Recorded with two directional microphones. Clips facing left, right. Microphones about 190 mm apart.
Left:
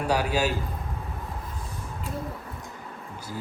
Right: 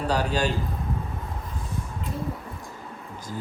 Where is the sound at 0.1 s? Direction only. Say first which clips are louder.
Even; 10° left (ahead or behind).